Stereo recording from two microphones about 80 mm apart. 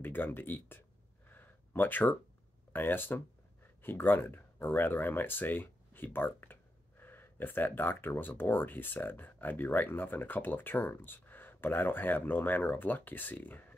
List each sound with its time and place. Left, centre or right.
0.0 s speech: left
1.3 s a sound: left
2.7 s speech: left